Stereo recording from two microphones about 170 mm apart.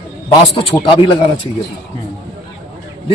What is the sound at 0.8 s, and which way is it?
Speech, 30° left (ahead or behind).